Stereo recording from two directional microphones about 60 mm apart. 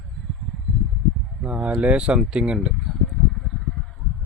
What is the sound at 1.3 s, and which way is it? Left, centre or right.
Speech, centre.